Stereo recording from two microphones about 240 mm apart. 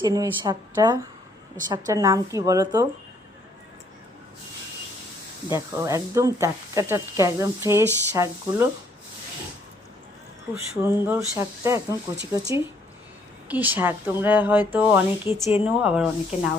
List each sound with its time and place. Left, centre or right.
0.0 s speech: centre
5.5 s speech: centre
10.5 s speech: centre
12.1 s speech: right
13.5 s speech: centre